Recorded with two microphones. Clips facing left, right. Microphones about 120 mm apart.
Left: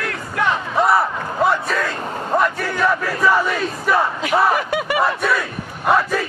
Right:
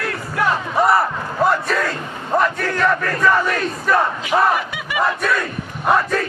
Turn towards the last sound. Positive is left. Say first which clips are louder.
# even
turn(degrees=0)  # may be behind; listen again after turning